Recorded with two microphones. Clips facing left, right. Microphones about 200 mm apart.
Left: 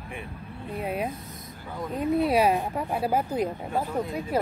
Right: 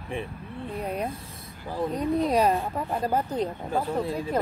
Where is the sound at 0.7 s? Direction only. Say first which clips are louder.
Left 1 dB; 5° left (ahead or behind).